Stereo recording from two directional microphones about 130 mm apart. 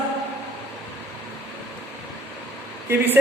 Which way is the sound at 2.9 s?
15° right (ahead or behind).